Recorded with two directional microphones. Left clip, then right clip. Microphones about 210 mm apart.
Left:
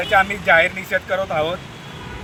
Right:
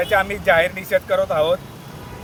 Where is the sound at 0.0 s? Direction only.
20° right (ahead or behind).